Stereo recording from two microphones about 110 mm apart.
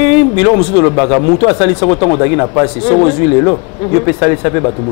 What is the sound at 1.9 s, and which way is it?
Speech, 50° left (ahead or behind).